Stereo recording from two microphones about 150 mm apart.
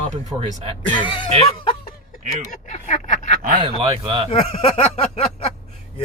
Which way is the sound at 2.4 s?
50° left (ahead or behind).